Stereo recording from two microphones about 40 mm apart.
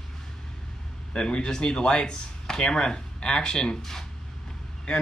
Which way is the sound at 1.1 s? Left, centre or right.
Left.